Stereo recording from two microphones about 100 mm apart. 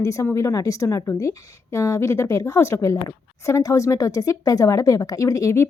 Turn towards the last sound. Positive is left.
turn(degrees=30)  # may be behind; listen again after turning